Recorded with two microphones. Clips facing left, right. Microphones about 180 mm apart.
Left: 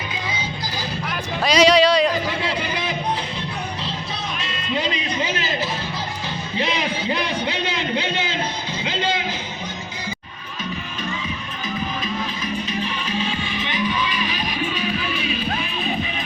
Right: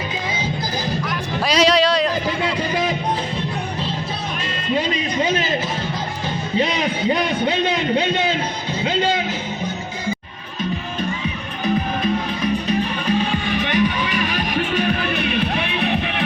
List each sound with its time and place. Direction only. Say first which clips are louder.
1.4 s music: left 2 dB; centre (ahead or behind)
11.6 s music: right 8 dB; 60° right (ahead or behind)